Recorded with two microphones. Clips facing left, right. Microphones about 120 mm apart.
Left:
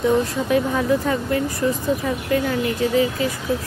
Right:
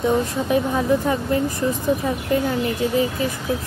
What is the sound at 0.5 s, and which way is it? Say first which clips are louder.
Speech: right 1 dB; 25° right (ahead or behind).